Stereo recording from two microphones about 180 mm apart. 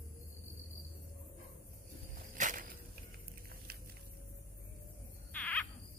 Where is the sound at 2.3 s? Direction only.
45° right (ahead or behind).